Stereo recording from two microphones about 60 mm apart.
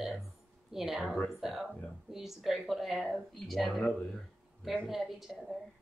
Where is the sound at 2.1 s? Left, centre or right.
Centre.